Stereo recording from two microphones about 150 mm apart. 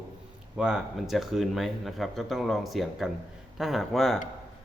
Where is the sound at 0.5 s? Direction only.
5° right (ahead or behind).